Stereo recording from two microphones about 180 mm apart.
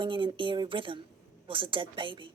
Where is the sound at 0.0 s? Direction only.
25° right (ahead or behind).